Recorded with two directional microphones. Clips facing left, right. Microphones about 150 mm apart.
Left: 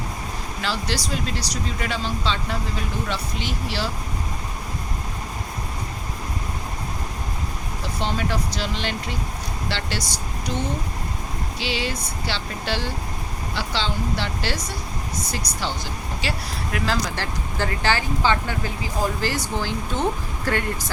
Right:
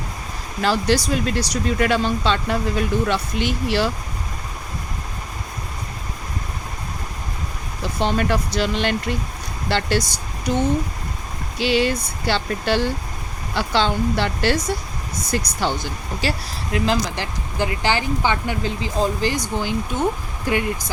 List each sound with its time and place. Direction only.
0.6 s speech: 50° right (ahead or behind)
8.0 s speech: 60° right (ahead or behind)
11.6 s speech: 50° right (ahead or behind)
16.2 s speech: 40° right (ahead or behind)
16.7 s speech: 20° right (ahead or behind)